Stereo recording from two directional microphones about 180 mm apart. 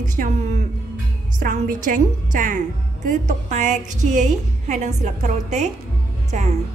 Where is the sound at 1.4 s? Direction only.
50° right (ahead or behind).